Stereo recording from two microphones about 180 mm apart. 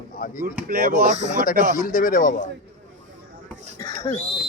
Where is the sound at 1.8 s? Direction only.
45° left (ahead or behind).